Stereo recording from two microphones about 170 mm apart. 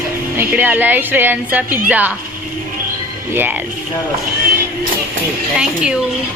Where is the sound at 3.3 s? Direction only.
10° right (ahead or behind).